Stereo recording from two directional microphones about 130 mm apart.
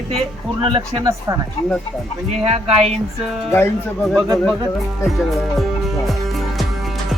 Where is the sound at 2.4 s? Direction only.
55° right (ahead or behind).